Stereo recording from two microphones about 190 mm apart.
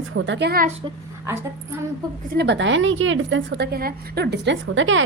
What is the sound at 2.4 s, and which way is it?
A woman's voice, 70° right (ahead or behind).